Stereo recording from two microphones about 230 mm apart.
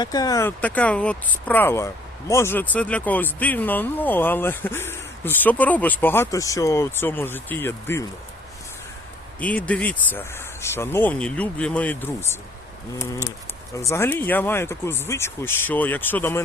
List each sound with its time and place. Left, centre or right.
0.0 s speech: centre
9.4 s speech: centre
13.7 s speech: centre